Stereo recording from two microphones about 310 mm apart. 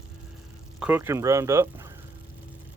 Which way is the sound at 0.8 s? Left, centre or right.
Centre.